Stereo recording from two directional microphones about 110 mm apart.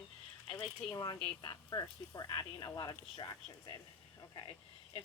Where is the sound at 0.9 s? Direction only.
35° left (ahead or behind).